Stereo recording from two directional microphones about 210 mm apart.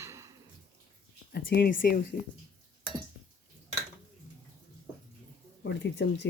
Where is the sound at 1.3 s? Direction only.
50° left (ahead or behind).